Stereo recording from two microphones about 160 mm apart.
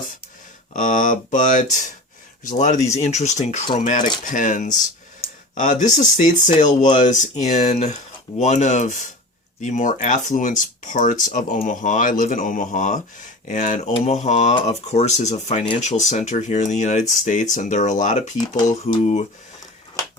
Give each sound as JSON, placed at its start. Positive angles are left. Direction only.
{"t": 0.7, "sound": "speech", "side_deg": 55}
{"t": 18.8, "sound": "speech", "side_deg": 40}